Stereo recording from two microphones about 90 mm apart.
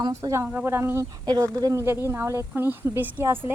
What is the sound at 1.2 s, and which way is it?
Speech, 45° right (ahead or behind).